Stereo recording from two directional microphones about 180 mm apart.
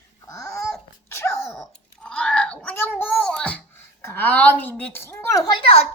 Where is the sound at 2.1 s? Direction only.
5° left (ahead or behind).